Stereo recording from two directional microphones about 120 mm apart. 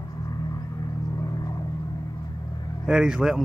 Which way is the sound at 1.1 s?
30° left (ahead or behind).